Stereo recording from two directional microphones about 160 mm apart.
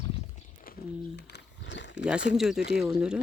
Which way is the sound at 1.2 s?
90° left.